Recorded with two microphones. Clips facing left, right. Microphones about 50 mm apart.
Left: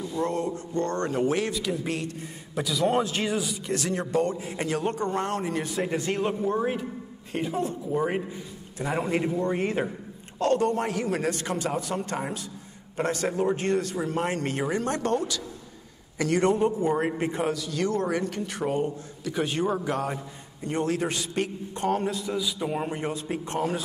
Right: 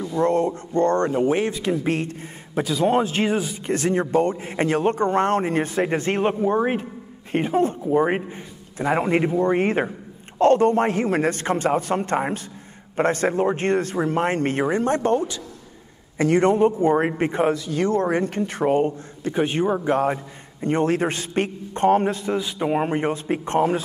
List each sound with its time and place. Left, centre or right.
0.0 s a man's voice: right